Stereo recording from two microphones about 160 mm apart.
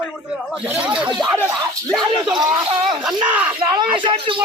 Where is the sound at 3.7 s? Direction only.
30° right (ahead or behind).